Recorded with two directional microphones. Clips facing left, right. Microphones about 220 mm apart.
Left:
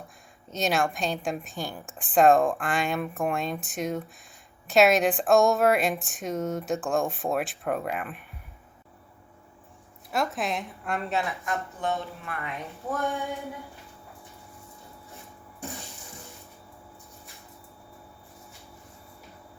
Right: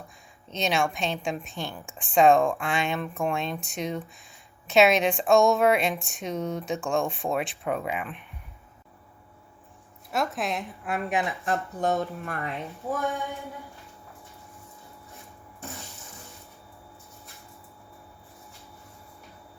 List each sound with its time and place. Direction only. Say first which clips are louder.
0.5 s speech: even; centre (ahead or behind)
10.1 s speech: even; centre (ahead or behind)
11.1 s a woman's voice: right 2 dB; 15° right (ahead or behind)
11.4 s speech: right 4 dB; 40° right (ahead or behind)
13.0 s speech: left 2 dB; centre (ahead or behind)